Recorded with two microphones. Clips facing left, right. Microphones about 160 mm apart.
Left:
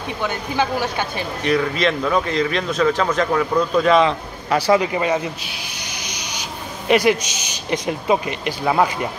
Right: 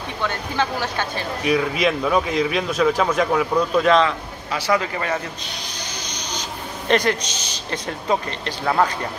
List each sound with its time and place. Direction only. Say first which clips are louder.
0.2 s a man's voice: left 2 dB; 10° left (ahead or behind)
1.4 s speech: left 1 dB; 5° right (ahead or behind)
4.7 s a man's voice: left 5 dB; 20° left (ahead or behind)
5.8 s vehicle: even; 10° left (ahead or behind)
6.9 s a man's voice: left 3 dB; 10° left (ahead or behind)